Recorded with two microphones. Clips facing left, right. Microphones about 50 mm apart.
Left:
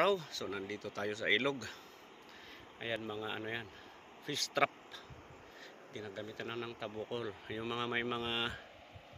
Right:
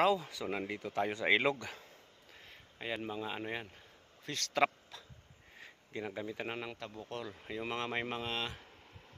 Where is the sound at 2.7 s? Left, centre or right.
Centre.